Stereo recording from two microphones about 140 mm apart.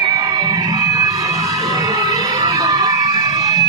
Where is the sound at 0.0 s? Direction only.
30° right (ahead or behind).